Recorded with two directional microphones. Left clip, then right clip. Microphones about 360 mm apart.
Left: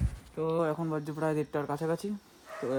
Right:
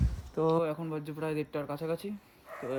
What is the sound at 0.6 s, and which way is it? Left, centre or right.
Speech, centre.